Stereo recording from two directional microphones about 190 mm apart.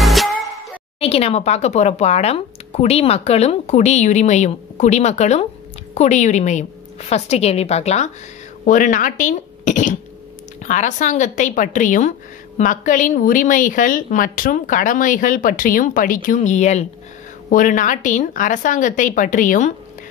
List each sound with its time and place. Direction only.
0.0 s music: centre (ahead or behind)
0.9 s speech: 30° left (ahead or behind)